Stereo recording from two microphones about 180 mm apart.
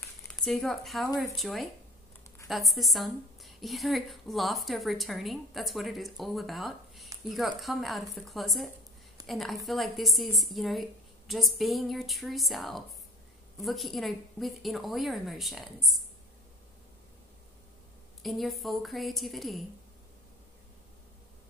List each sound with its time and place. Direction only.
0.3 s a woman's voice: 5° left (ahead or behind)
18.2 s a woman's voice: centre (ahead or behind)